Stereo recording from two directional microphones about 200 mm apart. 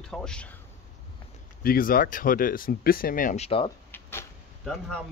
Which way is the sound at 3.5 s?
25° left (ahead or behind).